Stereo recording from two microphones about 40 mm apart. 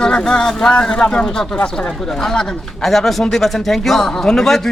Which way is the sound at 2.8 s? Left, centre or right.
Centre.